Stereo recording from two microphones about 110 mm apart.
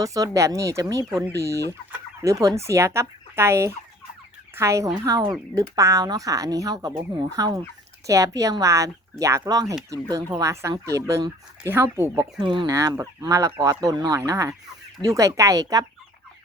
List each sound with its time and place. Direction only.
0.0 s speech: 30° right (ahead or behind)
2.2 s fowl: 30° right (ahead or behind)
5.0 s speech: 35° right (ahead or behind)
8.0 s fowl: 30° right (ahead or behind)
9.5 s speech: 35° right (ahead or behind)
11.7 s fowl: 20° right (ahead or behind)
12.4 s speech: 45° right (ahead or behind)
12.6 s speech: 30° right (ahead or behind)
14.3 s fowl: 25° right (ahead or behind)
15.0 s speech: 30° right (ahead or behind)